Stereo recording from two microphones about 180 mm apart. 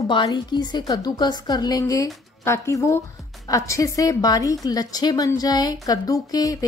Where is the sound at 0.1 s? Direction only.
25° left (ahead or behind).